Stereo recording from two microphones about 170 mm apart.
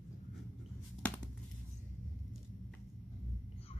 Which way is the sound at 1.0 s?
10° left (ahead or behind).